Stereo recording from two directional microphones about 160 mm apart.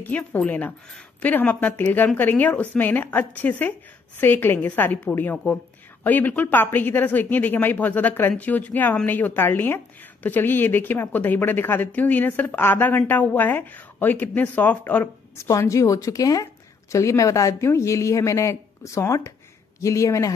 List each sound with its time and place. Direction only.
0.0 s speech: 10° left (ahead or behind)